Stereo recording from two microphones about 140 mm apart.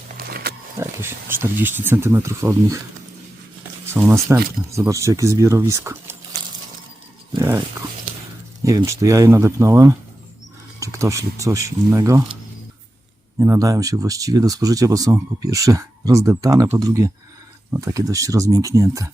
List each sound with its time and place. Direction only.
0.2 s wild animals: 90° right
0.8 s speech: 15° right (ahead or behind)
3.9 s speech: 20° right (ahead or behind)
8.6 s speech: 25° right (ahead or behind)
13.4 s speech: 25° right (ahead or behind)